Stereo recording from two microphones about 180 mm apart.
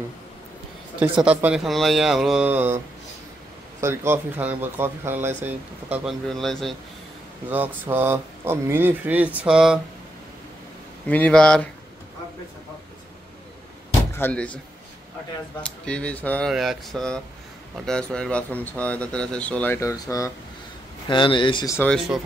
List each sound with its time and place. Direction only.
1.2 s speech: 5° right (ahead or behind)
3.8 s speech: 15° right (ahead or behind)
7.4 s speech: 10° right (ahead or behind)
11.1 s speech: 5° left (ahead or behind)
14.1 s speech: 10° left (ahead or behind)
15.6 s speech: 5° left (ahead or behind); by 21.7 s 25° left (ahead or behind)
21.7 s speech: 5° left (ahead or behind)